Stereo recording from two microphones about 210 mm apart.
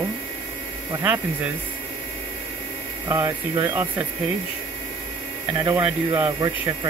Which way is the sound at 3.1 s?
15° right (ahead or behind).